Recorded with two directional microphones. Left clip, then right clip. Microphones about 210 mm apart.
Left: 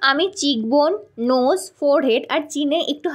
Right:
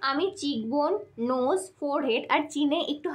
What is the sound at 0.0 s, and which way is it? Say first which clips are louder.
A woman's voice: left 10 dB; 35° left (ahead or behind).